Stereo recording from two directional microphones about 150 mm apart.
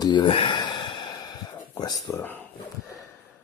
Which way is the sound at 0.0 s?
30° left (ahead or behind).